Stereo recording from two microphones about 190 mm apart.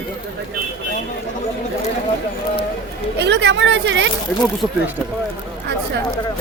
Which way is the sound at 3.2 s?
65° right (ahead or behind).